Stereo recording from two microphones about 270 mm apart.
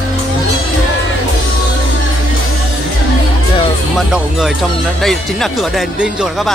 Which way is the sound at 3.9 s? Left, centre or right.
Centre.